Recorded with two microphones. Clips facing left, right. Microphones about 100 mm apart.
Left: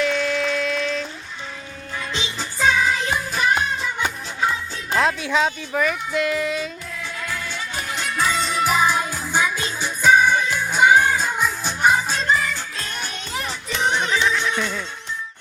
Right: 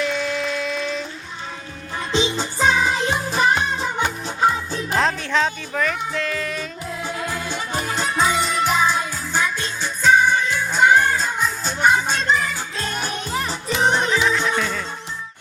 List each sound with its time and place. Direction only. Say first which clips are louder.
0.0 s a sound: left 2 dB; 5° right (ahead or behind)
2.4 s music: left 4 dB; 30° right (ahead or behind)
4.9 s music: left 1 dB; 5° left (ahead or behind)
7.0 s music: right 3 dB; 30° right (ahead or behind)
8.1 s music: right 2 dB; 20° right (ahead or behind)
8.4 s music: even; centre (ahead or behind)
12.9 s music: right 6 dB; 40° right (ahead or behind)
13.7 s music: right 2 dB; centre (ahead or behind)